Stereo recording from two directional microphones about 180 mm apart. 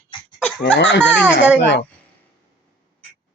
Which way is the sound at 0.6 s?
85° left.